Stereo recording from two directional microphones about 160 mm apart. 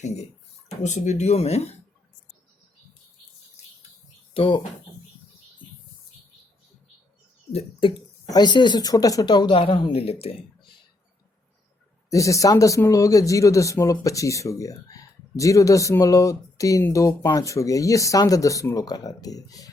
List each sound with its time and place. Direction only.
0.8 s speech: 50° left (ahead or behind)
4.4 s speech: 30° left (ahead or behind)
7.5 s speech: 30° left (ahead or behind)
12.1 s speech: 20° left (ahead or behind)